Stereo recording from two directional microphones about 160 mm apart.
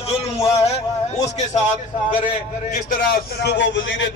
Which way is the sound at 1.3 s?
50° left (ahead or behind).